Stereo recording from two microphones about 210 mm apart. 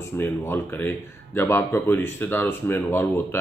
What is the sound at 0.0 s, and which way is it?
Speech, 10° left (ahead or behind).